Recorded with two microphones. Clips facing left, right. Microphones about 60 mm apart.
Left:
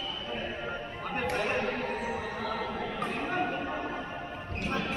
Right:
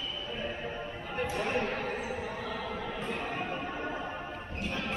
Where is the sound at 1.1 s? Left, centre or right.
Left.